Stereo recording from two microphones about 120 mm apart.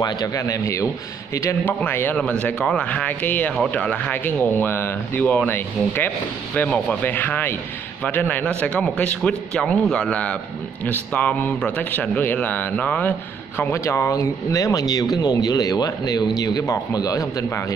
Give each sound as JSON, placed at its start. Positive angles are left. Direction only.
{"t": 0.0, "sound": "speech", "side_deg": 30}